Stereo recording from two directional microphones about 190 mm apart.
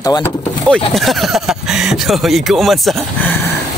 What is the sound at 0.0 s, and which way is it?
Speech, 20° left (ahead or behind).